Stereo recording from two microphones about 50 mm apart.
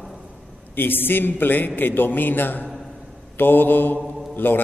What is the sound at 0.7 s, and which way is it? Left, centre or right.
A man's voice, left.